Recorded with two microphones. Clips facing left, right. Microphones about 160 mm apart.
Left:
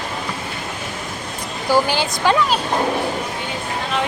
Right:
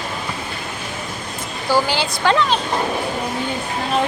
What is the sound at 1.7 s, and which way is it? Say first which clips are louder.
Speech: left 1 dB; 15° left (ahead or behind).